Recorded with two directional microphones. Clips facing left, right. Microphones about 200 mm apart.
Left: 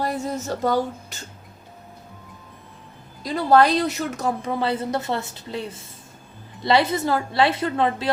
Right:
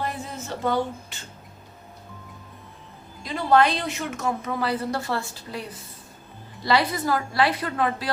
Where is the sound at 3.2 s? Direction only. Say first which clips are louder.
Left 3 dB; 40° left (ahead or behind).